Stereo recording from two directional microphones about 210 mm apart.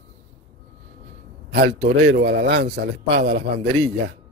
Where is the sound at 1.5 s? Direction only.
50° right (ahead or behind).